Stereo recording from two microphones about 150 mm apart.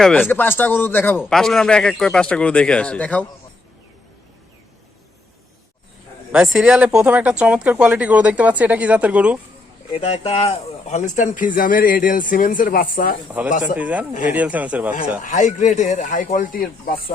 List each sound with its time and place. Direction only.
0.0 s speech: 10° left (ahead or behind)
1.2 s a man's voice: centre (ahead or behind)
6.3 s speech: 5° right (ahead or behind)
9.9 s speech: 45° left (ahead or behind); by 13.1 s 70° left (ahead or behind)
13.7 s speech: 10° right (ahead or behind)
15.2 s speech: 55° left (ahead or behind)